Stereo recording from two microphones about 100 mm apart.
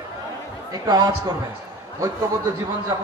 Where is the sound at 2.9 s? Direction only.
40° right (ahead or behind).